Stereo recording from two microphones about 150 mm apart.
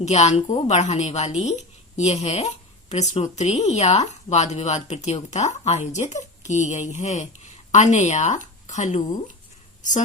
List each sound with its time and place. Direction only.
0.0 s a woman's voice: 50° left (ahead or behind)